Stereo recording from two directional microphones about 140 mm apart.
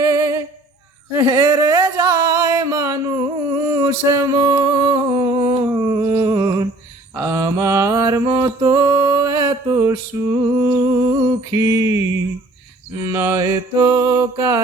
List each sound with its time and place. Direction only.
1.1 s a sound: 20° right (ahead or behind)
7.2 s mantra: 25° right (ahead or behind)
13.0 s mantra: 20° right (ahead or behind)